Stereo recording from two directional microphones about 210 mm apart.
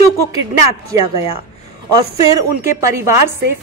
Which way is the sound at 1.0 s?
25° left (ahead or behind).